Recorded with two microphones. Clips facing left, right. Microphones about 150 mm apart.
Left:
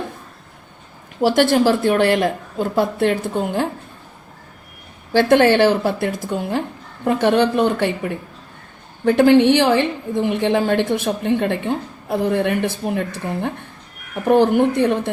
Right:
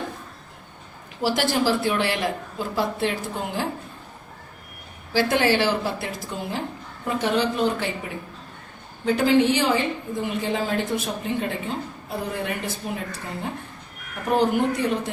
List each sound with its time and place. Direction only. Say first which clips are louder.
1.2 s speech: left 8 dB; 55° left (ahead or behind)
5.1 s a woman's voice: left 7 dB; 55° left (ahead or behind)
9.0 s a woman's voice: left 7 dB; 60° left (ahead or behind)